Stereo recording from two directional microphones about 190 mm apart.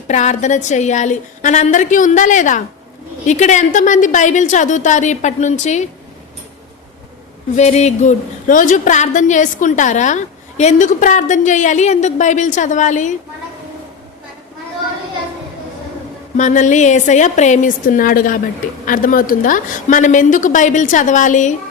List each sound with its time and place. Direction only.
0.1 s a woman's voice: 40° left (ahead or behind)
7.5 s a woman's voice: 35° left (ahead or behind)
16.4 s a woman's voice: 40° left (ahead or behind)